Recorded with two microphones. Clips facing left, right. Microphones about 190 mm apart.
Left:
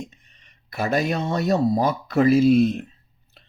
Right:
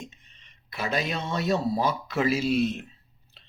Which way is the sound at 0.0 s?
45° left (ahead or behind).